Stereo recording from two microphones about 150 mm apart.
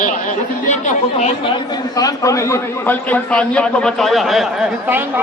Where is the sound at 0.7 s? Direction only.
55° left (ahead or behind).